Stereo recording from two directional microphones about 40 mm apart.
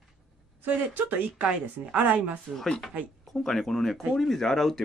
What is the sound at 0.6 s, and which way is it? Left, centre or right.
Speech, right.